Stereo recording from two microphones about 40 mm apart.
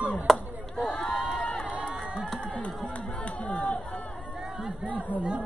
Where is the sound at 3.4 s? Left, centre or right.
Left.